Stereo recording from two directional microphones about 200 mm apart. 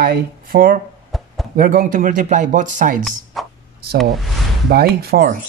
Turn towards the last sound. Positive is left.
turn(degrees=-50)  # may be behind; listen again after turning